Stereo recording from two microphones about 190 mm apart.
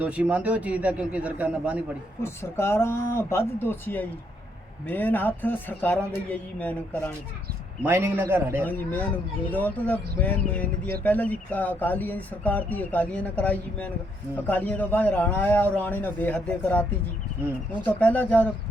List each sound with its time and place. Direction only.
0.0 s a man's voice: 5° right (ahead or behind)
2.2 s speech: 15° left (ahead or behind)
7.9 s a man's voice: 10° right (ahead or behind)
8.6 s speech: 10° left (ahead or behind)
17.8 s speech: 10° left (ahead or behind)